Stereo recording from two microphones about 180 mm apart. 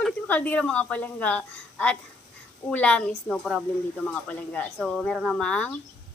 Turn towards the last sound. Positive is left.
turn(degrees=5)  # may be behind; listen again after turning